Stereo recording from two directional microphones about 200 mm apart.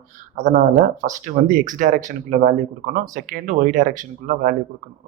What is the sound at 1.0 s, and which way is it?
Speech, 40° right (ahead or behind).